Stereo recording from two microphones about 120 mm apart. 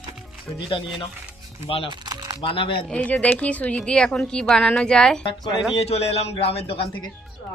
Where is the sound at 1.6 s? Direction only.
50° left (ahead or behind).